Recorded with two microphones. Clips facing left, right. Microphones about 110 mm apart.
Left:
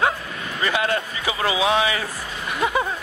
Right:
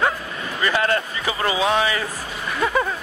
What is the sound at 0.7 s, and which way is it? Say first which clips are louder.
Speech: right 2 dB; 15° left (ahead or behind).